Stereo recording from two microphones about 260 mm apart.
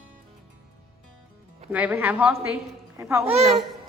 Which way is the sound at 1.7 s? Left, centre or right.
Centre.